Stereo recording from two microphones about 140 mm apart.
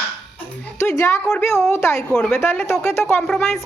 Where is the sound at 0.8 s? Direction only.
20° left (ahead or behind).